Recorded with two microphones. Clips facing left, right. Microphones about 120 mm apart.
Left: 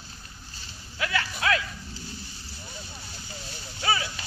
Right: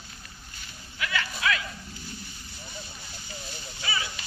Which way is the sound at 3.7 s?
60° left (ahead or behind).